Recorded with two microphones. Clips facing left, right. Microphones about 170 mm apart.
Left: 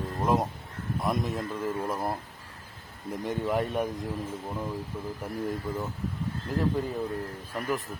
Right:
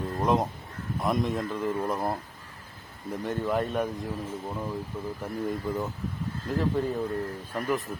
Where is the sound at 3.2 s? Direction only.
15° left (ahead or behind).